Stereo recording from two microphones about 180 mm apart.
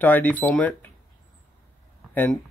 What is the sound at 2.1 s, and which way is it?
Speech, 10° left (ahead or behind).